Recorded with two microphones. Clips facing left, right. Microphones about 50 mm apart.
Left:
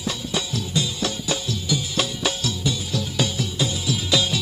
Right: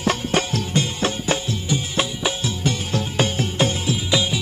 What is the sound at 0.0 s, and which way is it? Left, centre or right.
Music, right.